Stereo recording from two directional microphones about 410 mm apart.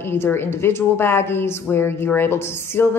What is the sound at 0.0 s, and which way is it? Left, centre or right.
A woman's voice, centre.